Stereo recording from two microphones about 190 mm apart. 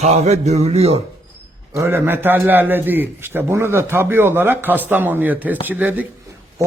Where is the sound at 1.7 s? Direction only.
10° right (ahead or behind).